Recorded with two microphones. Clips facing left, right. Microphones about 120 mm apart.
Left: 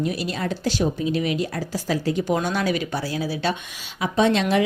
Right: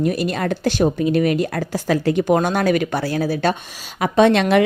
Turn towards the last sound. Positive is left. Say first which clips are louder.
# right 5 dB
turn(degrees=-65)  # may be behind; listen again after turning